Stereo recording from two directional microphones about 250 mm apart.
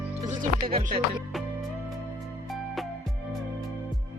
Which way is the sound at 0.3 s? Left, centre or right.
Right.